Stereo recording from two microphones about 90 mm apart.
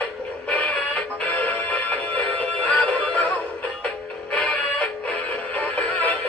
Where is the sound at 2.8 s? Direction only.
15° left (ahead or behind).